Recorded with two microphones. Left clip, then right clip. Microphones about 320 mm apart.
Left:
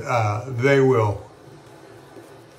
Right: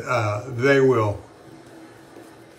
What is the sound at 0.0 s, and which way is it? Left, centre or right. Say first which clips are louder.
Speech: left 1 dB; centre.